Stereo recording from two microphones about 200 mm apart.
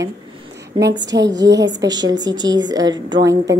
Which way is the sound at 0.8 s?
60° right (ahead or behind).